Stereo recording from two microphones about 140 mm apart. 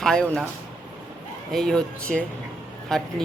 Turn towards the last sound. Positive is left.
turn(degrees=5)  # may be behind; listen again after turning